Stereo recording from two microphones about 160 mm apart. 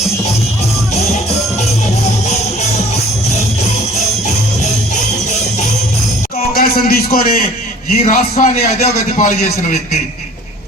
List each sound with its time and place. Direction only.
0.9 s music: 45° left (ahead or behind)
2.2 s music: 45° left (ahead or behind)
6.5 s a sound: 70° left (ahead or behind)
8.0 s a man's voice: 50° left (ahead or behind)